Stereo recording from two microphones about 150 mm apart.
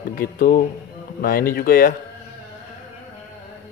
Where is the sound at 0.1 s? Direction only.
70° left (ahead or behind).